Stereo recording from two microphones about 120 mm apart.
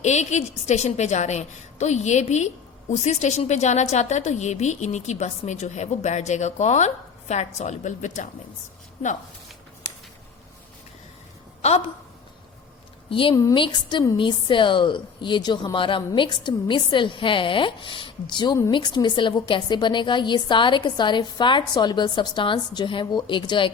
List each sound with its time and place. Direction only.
0.0 s a woman's voice: 75° left (ahead or behind); by 8.3 s 90° left
11.6 s speech: 60° left (ahead or behind)
13.1 s speech: 45° left (ahead or behind)
13.3 s a woman's voice: 30° left (ahead or behind)
13.6 s a woman's voice: 40° left (ahead or behind)